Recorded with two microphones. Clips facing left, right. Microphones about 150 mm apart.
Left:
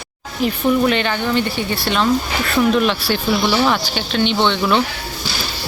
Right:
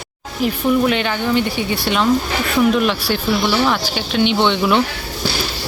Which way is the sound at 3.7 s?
10° right (ahead or behind).